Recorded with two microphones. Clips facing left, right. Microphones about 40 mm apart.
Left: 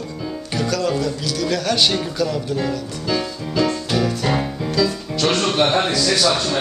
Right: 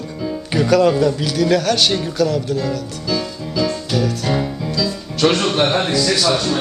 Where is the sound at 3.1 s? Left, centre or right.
Left.